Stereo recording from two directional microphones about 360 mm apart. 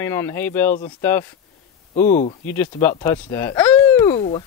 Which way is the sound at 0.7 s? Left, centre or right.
Left.